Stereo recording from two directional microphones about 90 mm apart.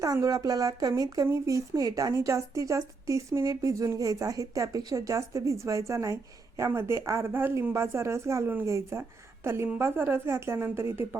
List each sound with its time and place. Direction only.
0.0 s a woman's voice: 40° right (ahead or behind)